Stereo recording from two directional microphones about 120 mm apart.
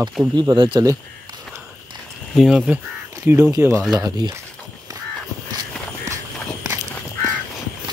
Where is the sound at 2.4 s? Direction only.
5° right (ahead or behind).